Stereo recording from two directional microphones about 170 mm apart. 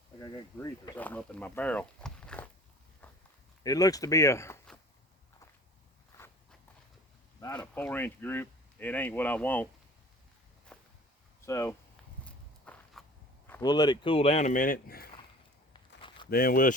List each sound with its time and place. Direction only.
0.2 s speech: 20° left (ahead or behind)
0.9 s speech: 10° left (ahead or behind)
3.0 s walk: 10° left (ahead or behind)
3.6 s speech: 20° left (ahead or behind)
6.1 s walk: 15° left (ahead or behind)
7.5 s speech: 10° left (ahead or behind)
10.7 s walk: 5° left (ahead or behind)
11.4 s speech: 15° left (ahead or behind)
12.2 s walk: 5° left (ahead or behind)
13.6 s speech: 25° left (ahead or behind); by 15.1 s 60° left (ahead or behind)
15.7 s a sound: 30° left (ahead or behind)
16.3 s speech: 60° left (ahead or behind)